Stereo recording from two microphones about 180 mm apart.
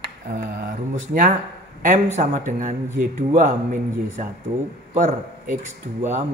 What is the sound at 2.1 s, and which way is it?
A man's voice, 45° right (ahead or behind).